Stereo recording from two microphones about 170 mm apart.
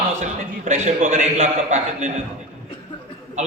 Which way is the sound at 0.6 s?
50° right (ahead or behind).